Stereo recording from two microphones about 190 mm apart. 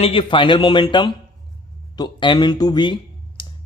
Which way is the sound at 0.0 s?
30° left (ahead or behind).